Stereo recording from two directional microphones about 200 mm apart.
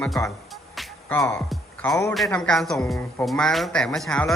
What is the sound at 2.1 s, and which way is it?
Speech, centre (ahead or behind).